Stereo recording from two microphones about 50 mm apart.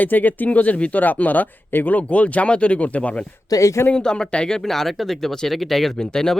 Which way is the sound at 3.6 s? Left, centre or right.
Left.